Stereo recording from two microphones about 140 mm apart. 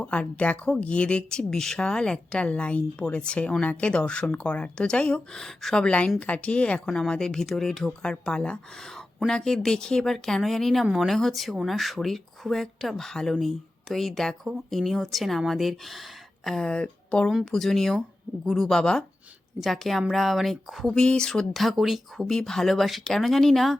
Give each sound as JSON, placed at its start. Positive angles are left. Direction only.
{"t": 0.0, "sound": "speech", "side_deg": 10}